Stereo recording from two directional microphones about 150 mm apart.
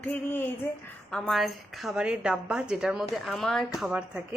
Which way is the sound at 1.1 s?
Centre (ahead or behind).